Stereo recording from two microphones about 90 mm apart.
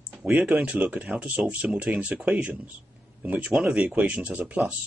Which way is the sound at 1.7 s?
15° right (ahead or behind).